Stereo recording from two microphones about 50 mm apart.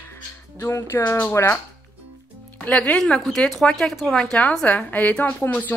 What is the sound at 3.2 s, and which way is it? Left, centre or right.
Speech, centre.